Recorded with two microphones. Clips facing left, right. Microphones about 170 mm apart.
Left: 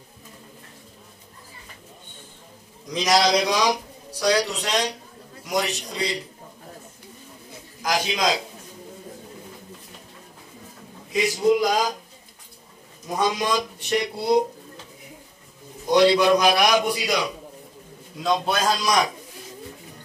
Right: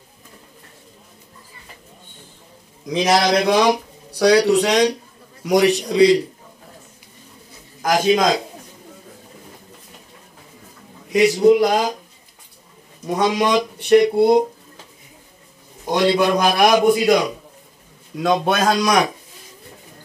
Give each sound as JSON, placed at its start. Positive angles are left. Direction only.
{"t": 2.9, "sound": "a man's voice", "side_deg": -55}
{"t": 7.8, "sound": "a man's voice", "side_deg": -50}
{"t": 11.4, "sound": "a man's voice", "side_deg": -55}
{"t": 13.0, "sound": "a man's voice", "side_deg": -75}
{"t": 15.9, "sound": "a man's voice", "side_deg": -50}
{"t": 18.2, "sound": "a man's voice", "side_deg": -70}